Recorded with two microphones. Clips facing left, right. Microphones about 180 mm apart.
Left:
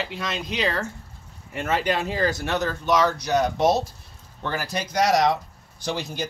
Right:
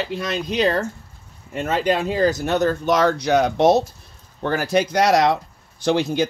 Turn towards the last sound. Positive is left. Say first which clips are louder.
# right 10 dB
turn(degrees=-65)  # may be behind; listen again after turning